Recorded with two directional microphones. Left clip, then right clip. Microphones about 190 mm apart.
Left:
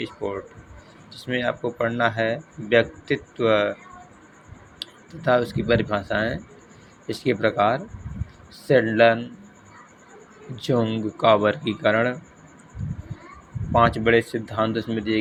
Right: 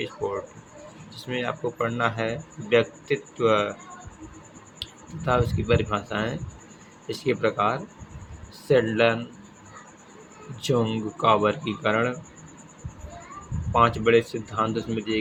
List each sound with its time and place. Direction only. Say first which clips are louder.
0.0 s speech: even; 20° left (ahead or behind)
4.8 s speech: left 3 dB; 20° left (ahead or behind)
10.6 s speech: left 2 dB; 15° left (ahead or behind)
13.7 s speech: left 1 dB; 20° left (ahead or behind)